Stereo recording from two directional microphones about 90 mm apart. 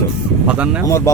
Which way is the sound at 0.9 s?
35° left (ahead or behind).